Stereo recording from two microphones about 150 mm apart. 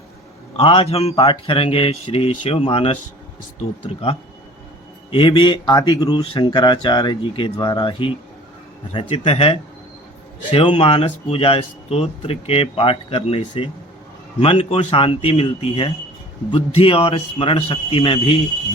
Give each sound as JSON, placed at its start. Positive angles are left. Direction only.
{"t": 0.5, "sound": "speech", "side_deg": 40}